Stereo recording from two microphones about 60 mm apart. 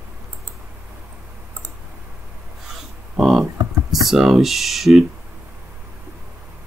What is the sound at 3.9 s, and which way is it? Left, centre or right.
Speech, centre.